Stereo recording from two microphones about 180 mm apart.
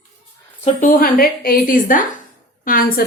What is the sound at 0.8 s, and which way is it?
A woman's voice, 50° left (ahead or behind).